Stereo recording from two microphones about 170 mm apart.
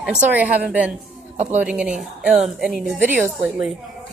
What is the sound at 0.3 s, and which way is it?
Speech, 10° right (ahead or behind).